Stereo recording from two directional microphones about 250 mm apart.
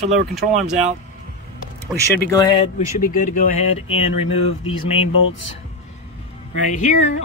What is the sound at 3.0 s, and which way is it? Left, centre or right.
Speech, left.